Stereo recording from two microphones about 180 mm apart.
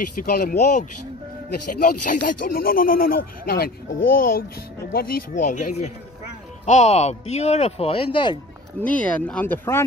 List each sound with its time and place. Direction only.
0.1 s speech: 55° left (ahead or behind); by 8.4 s 25° left (ahead or behind)
8.8 s speech: 10° left (ahead or behind)